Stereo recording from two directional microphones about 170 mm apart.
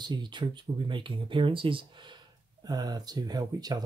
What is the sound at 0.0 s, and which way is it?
Speech, 25° right (ahead or behind).